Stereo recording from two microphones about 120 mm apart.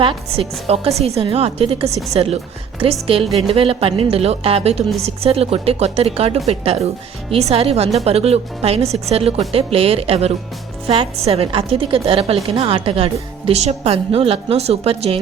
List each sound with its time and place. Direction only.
0.0 s a woman's voice: 50° right (ahead or behind)